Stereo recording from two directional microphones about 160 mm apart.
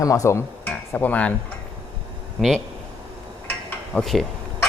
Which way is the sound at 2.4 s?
Centre (ahead or behind).